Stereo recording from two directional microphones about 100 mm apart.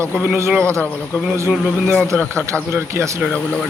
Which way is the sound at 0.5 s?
15° left (ahead or behind).